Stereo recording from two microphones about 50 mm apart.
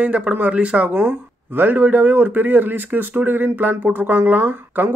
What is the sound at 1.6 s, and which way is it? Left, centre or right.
Speech, right.